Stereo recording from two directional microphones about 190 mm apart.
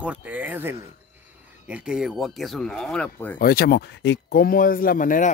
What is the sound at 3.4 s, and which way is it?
Speech, 55° left (ahead or behind).